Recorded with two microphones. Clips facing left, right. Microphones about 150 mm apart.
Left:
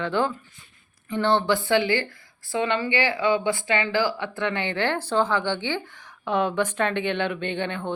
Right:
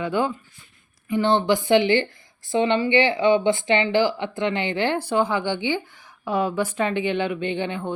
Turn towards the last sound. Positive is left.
turn(degrees=-10)  # may be behind; listen again after turning